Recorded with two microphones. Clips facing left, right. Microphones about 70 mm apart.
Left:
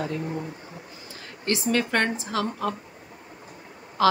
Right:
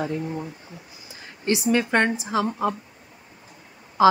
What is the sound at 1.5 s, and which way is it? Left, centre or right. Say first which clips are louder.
A woman's voice: right 3 dB; centre.